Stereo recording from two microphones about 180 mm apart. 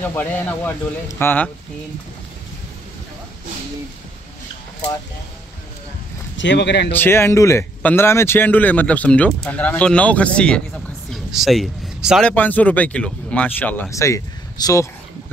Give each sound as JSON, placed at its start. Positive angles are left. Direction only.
{"t": 0.0, "sound": "speech", "side_deg": 10}
{"t": 6.3, "sound": "speech", "side_deg": 85}
{"t": 6.9, "sound": "speech", "side_deg": 10}